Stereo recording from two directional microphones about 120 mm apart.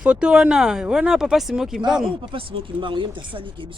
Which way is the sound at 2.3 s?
45° right (ahead or behind).